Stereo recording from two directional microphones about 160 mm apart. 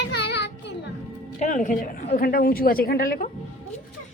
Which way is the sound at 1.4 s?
50° left (ahead or behind).